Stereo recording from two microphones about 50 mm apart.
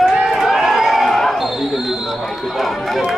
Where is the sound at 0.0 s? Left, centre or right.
Centre.